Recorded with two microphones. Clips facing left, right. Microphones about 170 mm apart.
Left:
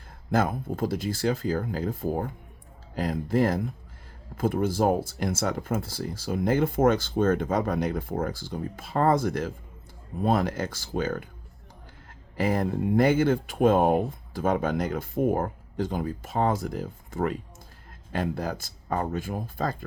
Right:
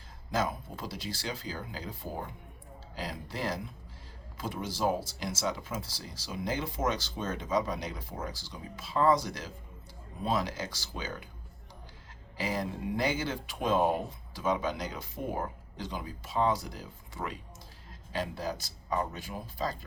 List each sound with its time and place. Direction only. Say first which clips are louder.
0.3 s speech: left 7 dB; 55° left (ahead or behind)
12.4 s speech: left 8 dB; 55° left (ahead or behind)